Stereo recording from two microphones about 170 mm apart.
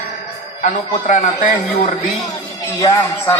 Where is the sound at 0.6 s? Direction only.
45° left (ahead or behind).